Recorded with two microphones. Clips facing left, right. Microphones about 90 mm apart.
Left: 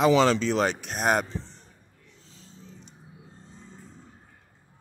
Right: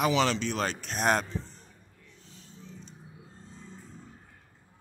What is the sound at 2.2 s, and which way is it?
Dog, 30° left (ahead or behind).